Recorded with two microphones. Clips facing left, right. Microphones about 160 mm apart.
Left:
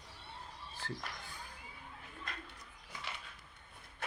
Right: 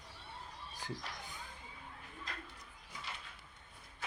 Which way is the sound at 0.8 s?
15° right (ahead or behind).